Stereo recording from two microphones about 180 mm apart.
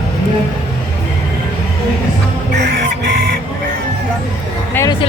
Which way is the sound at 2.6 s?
70° right (ahead or behind).